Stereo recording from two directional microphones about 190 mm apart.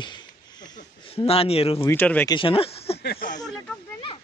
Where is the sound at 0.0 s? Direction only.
20° left (ahead or behind).